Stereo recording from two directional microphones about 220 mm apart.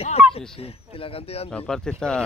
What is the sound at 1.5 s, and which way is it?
Speech, 5° left (ahead or behind).